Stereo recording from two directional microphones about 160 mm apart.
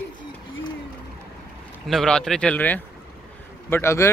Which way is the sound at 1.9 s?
5° left (ahead or behind).